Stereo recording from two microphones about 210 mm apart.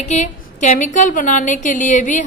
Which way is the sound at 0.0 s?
35° left (ahead or behind).